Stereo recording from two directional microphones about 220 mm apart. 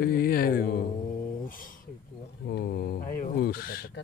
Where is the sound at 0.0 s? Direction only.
45° left (ahead or behind).